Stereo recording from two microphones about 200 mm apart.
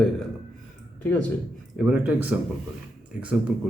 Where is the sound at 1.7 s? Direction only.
5° right (ahead or behind).